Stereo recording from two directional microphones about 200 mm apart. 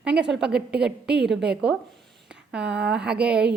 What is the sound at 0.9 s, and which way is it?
Speech, 55° right (ahead or behind).